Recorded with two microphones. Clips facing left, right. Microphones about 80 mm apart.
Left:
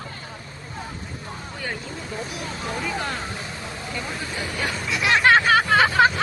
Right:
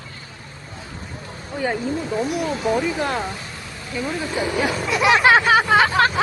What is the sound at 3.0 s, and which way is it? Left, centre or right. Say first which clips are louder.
Speech: right 5 dB; right.